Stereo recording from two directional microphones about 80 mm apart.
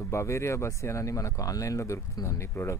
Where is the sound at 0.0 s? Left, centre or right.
Left.